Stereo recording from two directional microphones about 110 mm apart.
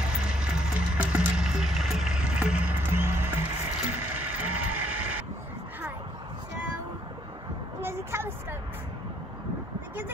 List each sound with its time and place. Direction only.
0.0 s music: 10° right (ahead or behind)
3.9 s vehicle: 15° right (ahead or behind)
7.8 s a sound: 20° right (ahead or behind)